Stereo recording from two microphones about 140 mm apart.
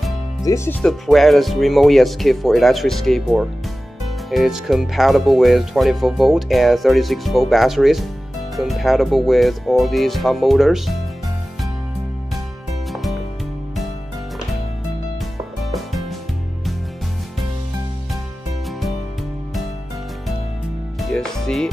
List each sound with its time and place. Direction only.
0.5 s speech: 25° left (ahead or behind)
0.8 s speech: centre (ahead or behind)
12.9 s music: centre (ahead or behind)
15.6 s music: centre (ahead or behind)
21.0 s music: 5° left (ahead or behind)